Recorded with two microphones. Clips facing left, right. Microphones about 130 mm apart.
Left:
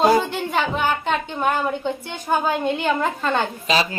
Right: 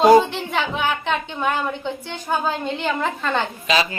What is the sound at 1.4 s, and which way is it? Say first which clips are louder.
Speech: left 1 dB; 45° left (ahead or behind).